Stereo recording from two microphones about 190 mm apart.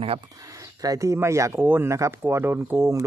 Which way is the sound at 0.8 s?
15° right (ahead or behind).